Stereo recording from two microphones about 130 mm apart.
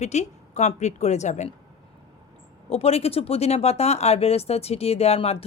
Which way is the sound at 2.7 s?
50° left (ahead or behind).